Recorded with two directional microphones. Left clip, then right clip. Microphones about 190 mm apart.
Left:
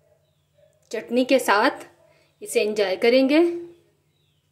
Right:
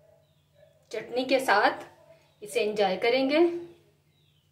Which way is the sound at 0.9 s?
35° left (ahead or behind).